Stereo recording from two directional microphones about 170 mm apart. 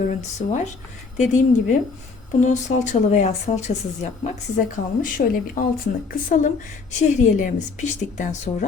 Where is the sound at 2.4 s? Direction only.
45° left (ahead or behind).